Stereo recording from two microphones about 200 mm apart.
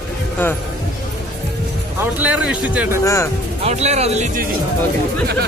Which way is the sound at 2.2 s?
5° right (ahead or behind).